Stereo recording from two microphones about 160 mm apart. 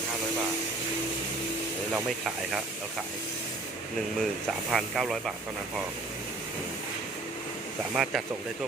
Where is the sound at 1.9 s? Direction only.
Centre (ahead or behind).